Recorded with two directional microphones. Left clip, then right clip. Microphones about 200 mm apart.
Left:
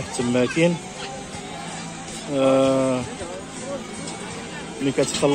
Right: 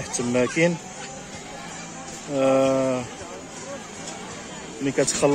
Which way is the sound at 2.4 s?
10° right (ahead or behind).